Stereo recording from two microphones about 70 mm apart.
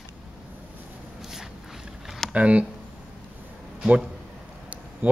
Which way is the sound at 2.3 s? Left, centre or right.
Centre.